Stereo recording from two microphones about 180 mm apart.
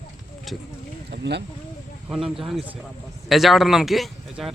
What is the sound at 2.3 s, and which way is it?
Speech, 5° right (ahead or behind).